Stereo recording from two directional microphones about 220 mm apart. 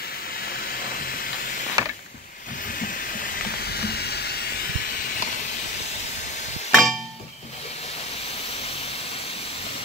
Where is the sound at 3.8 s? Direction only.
45° left (ahead or behind).